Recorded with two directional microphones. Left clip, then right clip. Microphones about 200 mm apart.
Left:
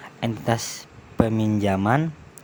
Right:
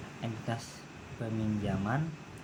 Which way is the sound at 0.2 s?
55° left (ahead or behind).